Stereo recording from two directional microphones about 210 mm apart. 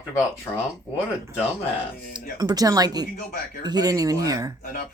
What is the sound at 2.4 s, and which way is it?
Speech, 20° right (ahead or behind).